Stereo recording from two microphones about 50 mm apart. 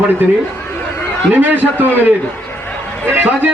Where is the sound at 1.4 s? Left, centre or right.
Right.